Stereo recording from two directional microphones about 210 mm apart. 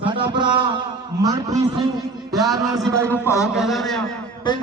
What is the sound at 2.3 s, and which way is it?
A man's voice, centre (ahead or behind).